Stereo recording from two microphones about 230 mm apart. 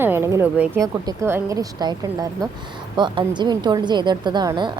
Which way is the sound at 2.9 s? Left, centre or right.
Centre.